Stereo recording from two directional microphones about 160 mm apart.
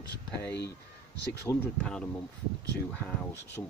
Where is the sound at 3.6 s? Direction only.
15° left (ahead or behind).